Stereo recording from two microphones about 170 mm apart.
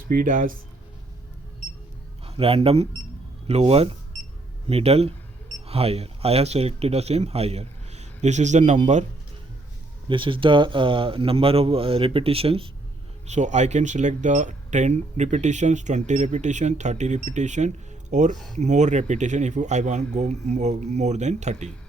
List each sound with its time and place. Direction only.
0.1 s speech: 55° right (ahead or behind)
2.2 s speech: 35° right (ahead or behind)
10.1 s speech: 30° right (ahead or behind)